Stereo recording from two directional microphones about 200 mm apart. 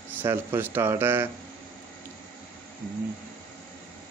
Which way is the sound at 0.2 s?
10° right (ahead or behind).